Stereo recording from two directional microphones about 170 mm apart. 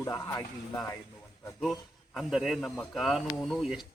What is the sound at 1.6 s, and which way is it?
A man's voice, centre (ahead or behind).